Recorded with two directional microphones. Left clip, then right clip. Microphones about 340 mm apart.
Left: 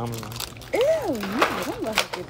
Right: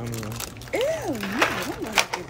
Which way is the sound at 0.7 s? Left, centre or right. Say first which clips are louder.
Left 4 dB; centre.